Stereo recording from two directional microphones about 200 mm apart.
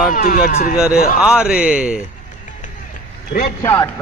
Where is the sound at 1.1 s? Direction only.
5° right (ahead or behind).